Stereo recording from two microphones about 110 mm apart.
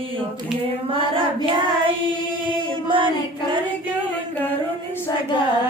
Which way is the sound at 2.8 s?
50° right (ahead or behind).